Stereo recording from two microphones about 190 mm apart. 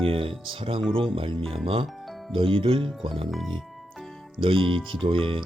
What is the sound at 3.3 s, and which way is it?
Music, centre (ahead or behind).